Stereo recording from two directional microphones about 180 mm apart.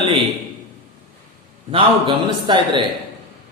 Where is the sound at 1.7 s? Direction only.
30° right (ahead or behind).